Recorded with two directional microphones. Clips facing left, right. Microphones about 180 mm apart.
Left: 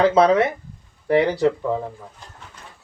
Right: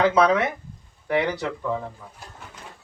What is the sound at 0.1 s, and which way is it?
Speech, 30° left (ahead or behind).